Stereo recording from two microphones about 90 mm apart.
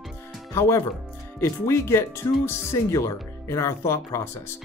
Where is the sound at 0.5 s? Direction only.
30° left (ahead or behind).